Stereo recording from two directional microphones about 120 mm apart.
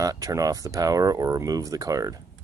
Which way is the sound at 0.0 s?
30° right (ahead or behind).